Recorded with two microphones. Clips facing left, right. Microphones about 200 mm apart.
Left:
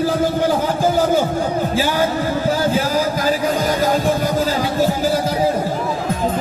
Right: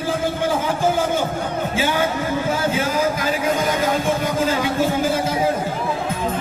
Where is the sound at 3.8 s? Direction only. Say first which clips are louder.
Left 3 dB; 35° left (ahead or behind).